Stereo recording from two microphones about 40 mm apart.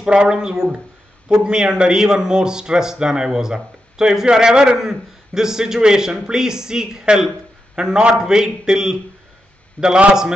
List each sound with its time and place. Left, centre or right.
0.0 s a man's voice: right
9.8 s a man's voice: left